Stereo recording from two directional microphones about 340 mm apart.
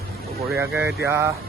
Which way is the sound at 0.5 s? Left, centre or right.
Centre.